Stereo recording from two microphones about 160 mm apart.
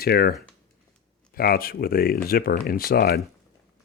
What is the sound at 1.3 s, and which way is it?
Speech, 70° left (ahead or behind).